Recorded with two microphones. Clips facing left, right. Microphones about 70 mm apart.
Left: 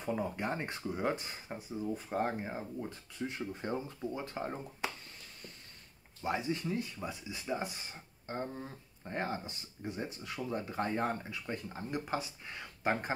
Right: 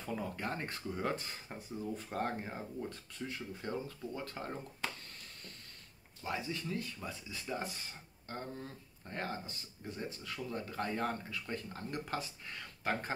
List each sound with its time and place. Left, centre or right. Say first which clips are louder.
0.0 s speech: left 4 dB; centre
3.3 s speech: left 4 dB; left
6.2 s speech: left 5 dB; left